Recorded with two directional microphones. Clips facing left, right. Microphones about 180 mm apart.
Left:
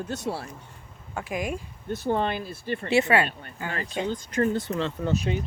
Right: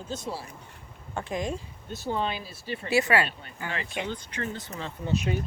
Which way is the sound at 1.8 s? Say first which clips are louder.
Left 5 dB; 55° left (ahead or behind).